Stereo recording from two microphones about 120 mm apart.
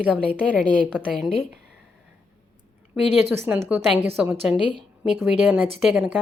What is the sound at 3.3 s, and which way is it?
A woman's voice, 20° right (ahead or behind).